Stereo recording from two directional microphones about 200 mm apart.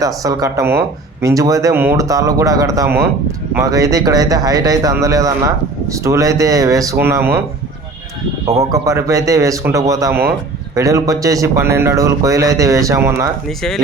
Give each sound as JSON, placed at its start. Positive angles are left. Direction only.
{"t": 0.0, "sound": "speech", "side_deg": -15}
{"t": 8.7, "sound": "speech", "side_deg": -15}